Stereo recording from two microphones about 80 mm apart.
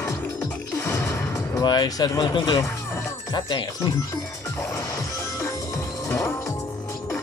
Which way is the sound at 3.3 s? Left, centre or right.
Left.